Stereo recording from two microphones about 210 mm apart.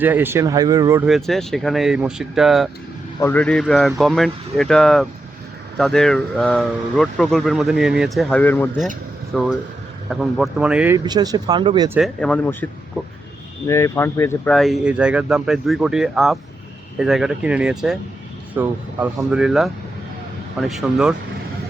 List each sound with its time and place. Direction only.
0.0 s speech: 10° right (ahead or behind)
1.0 s speech: centre (ahead or behind)
3.2 s speech: 10° left (ahead or behind)
10.9 s speech: 20° right (ahead or behind)
11.9 s speech: centre (ahead or behind)
13.7 s speech: 15° left (ahead or behind); by 21.2 s 5° right (ahead or behind)